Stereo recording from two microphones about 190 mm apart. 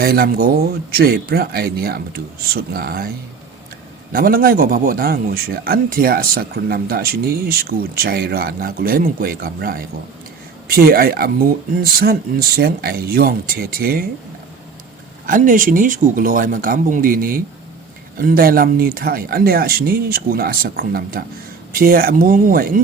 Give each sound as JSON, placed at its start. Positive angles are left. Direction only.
{"t": 0.0, "sound": "speech", "side_deg": -55}
{"t": 4.1, "sound": "a man's voice", "side_deg": -50}
{"t": 15.3, "sound": "a man's voice", "side_deg": -45}